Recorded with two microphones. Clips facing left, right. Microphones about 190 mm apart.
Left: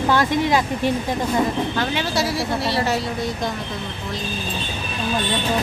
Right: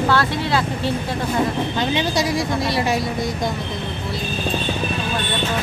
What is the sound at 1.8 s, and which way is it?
Speech, 20° right (ahead or behind).